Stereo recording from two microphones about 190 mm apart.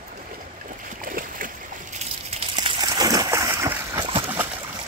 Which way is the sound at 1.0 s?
45° right (ahead or behind).